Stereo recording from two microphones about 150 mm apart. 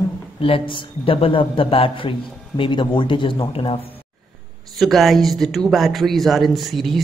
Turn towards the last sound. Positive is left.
turn(degrees=0)  # may be behind; listen again after turning